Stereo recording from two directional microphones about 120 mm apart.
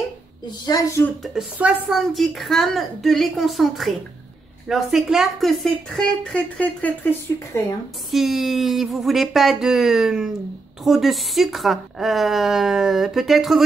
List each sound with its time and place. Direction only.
0.7 s speech: 30° left (ahead or behind)
1.2 s speech: 5° right (ahead or behind); by 7.6 s 15° left (ahead or behind)
8.1 s speech: centre (ahead or behind)